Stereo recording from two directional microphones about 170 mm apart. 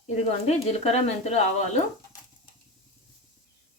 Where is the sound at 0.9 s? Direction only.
40° left (ahead or behind).